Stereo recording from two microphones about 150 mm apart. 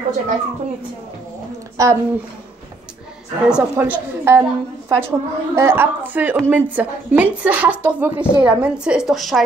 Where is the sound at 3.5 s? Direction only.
10° right (ahead or behind).